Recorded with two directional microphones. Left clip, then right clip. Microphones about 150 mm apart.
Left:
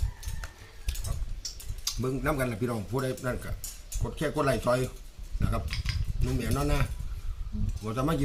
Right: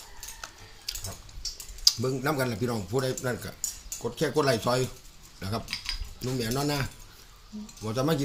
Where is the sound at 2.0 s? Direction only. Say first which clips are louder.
Right 1 dB; 15° left (ahead or behind).